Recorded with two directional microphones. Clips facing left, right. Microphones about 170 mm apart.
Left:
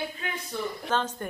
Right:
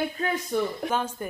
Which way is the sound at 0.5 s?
50° right (ahead or behind).